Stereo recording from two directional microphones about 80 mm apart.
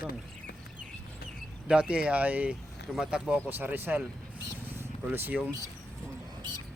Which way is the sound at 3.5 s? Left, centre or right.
Right.